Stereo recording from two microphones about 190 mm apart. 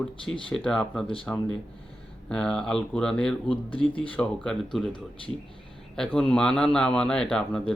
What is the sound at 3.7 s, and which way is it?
Speech, 25° left (ahead or behind).